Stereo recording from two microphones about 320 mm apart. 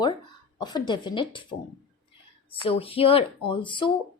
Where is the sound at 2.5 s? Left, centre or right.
Centre.